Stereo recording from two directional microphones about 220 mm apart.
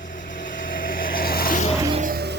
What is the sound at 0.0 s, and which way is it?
Vehicle, 35° left (ahead or behind).